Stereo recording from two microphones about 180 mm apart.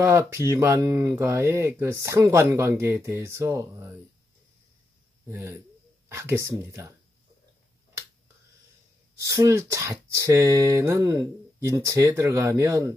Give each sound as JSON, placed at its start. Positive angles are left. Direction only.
{"t": 0.0, "sound": "speech", "side_deg": -15}
{"t": 5.3, "sound": "speech", "side_deg": -15}
{"t": 9.2, "sound": "speech", "side_deg": -15}